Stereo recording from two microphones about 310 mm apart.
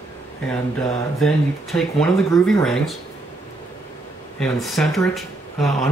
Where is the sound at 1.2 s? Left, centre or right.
Centre.